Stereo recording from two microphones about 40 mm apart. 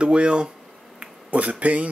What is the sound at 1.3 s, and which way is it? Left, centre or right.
Speech, right.